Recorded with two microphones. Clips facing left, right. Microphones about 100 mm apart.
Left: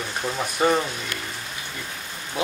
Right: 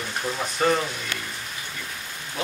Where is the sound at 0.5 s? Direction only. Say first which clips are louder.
Left 2 dB; 10° left (ahead or behind).